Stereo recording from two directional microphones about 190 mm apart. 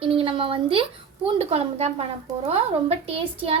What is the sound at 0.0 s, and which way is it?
A woman's voice, 30° right (ahead or behind).